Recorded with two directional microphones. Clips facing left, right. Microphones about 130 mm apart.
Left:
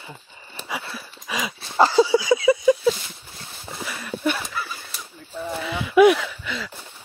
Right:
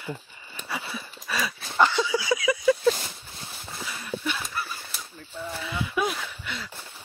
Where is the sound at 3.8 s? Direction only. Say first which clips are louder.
Left 6 dB; 65° left (ahead or behind).